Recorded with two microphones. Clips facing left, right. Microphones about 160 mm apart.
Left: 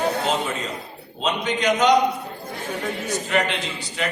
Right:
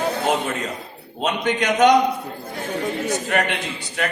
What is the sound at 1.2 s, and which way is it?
Speech, 55° right (ahead or behind).